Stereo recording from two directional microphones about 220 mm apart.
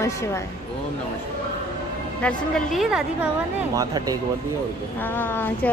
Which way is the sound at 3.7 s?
15° right (ahead or behind).